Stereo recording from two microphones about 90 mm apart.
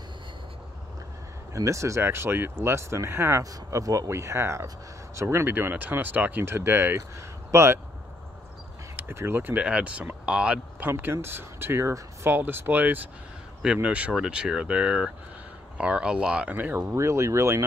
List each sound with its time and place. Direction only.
1.5 s speech: 35° right (ahead or behind)
8.9 s speech: 25° right (ahead or behind)
10.9 s speech: 25° right (ahead or behind)
16.9 s speech: 30° right (ahead or behind)